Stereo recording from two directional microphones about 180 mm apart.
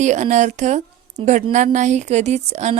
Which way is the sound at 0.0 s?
40° right (ahead or behind).